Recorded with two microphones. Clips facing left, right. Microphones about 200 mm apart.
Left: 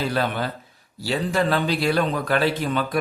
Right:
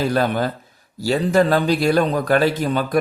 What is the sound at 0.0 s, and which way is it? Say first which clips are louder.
A man's voice: right 5 dB; 45° right (ahead or behind).